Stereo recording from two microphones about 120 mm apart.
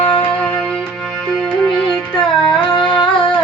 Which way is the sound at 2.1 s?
40° left (ahead or behind).